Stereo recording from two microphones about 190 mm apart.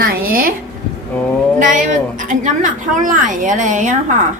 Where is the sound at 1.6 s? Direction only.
40° right (ahead or behind).